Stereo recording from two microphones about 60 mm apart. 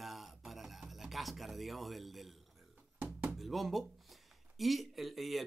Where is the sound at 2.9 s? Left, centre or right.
Right.